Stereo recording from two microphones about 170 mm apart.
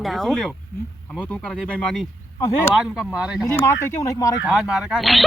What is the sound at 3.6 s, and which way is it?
Speech, 15° left (ahead or behind).